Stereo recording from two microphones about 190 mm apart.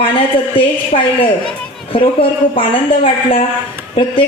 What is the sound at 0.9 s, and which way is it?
Speech, 35° left (ahead or behind).